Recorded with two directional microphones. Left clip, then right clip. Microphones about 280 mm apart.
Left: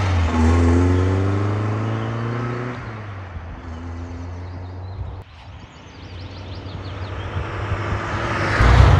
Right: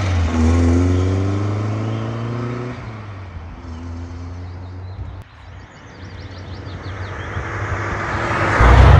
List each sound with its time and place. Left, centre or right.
0.0 s vehicle: centre
6.8 s vehicle: centre